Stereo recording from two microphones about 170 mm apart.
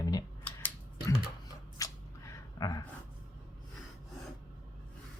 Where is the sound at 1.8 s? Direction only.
20° left (ahead or behind).